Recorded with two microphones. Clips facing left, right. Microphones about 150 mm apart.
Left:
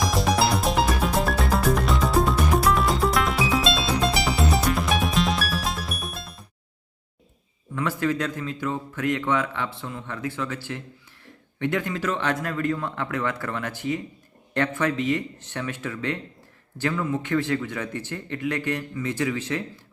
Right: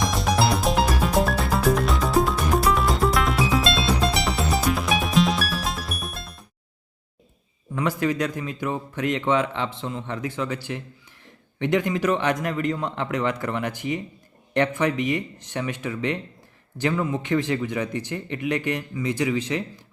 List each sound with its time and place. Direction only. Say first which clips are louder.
0.0 s music: even; centre (ahead or behind)
7.7 s a man's voice: right 1 dB; 15° right (ahead or behind)